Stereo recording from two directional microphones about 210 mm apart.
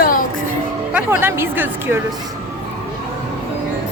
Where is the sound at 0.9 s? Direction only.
10° right (ahead or behind).